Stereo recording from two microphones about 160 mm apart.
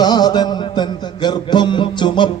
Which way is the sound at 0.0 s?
25° left (ahead or behind).